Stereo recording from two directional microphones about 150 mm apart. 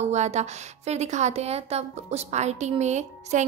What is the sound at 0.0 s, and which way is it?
A woman's voice, 50° right (ahead or behind).